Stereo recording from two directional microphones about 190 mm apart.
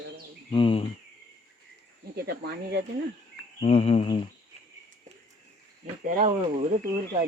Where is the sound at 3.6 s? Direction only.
35° left (ahead or behind).